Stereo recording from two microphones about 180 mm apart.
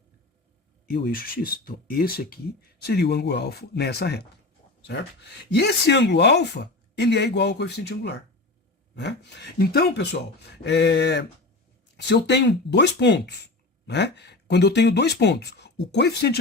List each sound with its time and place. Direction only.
0.9 s speech: 55° left (ahead or behind)
5.5 s speech: 70° left (ahead or behind)